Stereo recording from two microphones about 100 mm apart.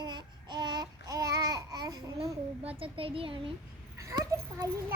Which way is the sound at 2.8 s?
65° right (ahead or behind).